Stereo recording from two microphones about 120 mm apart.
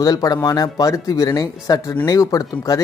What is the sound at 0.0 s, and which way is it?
Speech, 30° left (ahead or behind).